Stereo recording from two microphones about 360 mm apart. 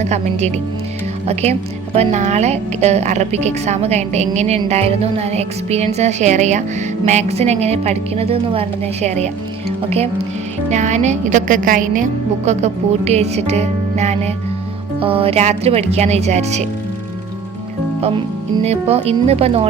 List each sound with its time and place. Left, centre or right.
0.0 s a woman's voice: centre
18.5 s a woman's voice: centre